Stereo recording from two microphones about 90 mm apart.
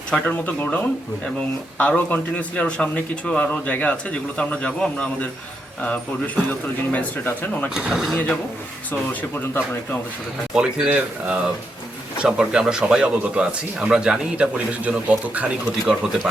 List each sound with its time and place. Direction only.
0.1 s a man's voice: 15° left (ahead or behind)
1.8 s a man's voice: 15° left (ahead or behind)
7.7 s speech: 5° right (ahead or behind)
10.5 s speech: 10° right (ahead or behind)